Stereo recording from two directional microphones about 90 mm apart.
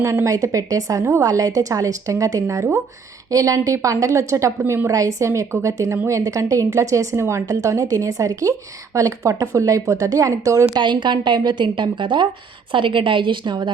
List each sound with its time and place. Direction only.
0.0 s a woman's voice: 30° right (ahead or behind)
10.8 s a woman's voice: 55° right (ahead or behind)